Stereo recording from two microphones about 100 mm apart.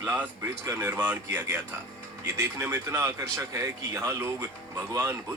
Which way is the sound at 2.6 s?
25° right (ahead or behind).